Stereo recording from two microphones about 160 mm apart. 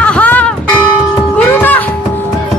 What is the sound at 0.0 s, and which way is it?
Church bell, 10° left (ahead or behind).